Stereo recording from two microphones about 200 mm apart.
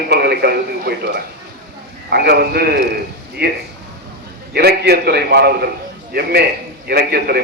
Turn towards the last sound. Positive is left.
turn(degrees=-50)  # may be behind; listen again after turning